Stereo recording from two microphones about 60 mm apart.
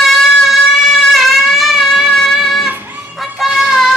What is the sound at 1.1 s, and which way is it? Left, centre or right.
Shofar, centre.